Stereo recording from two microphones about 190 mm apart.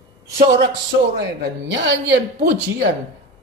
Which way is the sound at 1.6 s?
70° right (ahead or behind).